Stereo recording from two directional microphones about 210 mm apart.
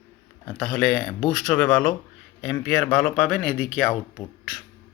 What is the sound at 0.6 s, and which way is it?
Speech, 5° left (ahead or behind).